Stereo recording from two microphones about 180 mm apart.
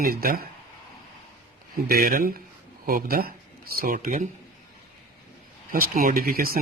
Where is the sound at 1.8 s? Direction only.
55° right (ahead or behind).